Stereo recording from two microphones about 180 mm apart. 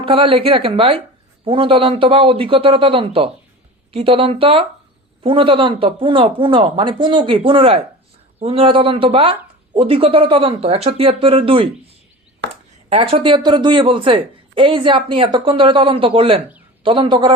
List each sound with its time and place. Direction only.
0.0 s speech: 30° right (ahead or behind)
12.9 s speech: 30° right (ahead or behind)